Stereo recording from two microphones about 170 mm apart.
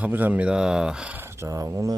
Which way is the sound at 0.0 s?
10° right (ahead or behind).